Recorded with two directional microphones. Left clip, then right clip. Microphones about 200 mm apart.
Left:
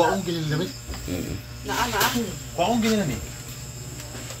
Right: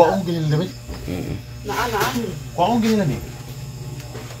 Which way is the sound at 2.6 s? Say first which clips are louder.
Right 4 dB; 15° right (ahead or behind).